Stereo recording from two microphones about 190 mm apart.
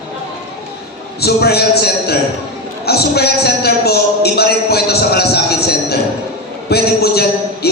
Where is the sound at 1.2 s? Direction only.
55° left (ahead or behind).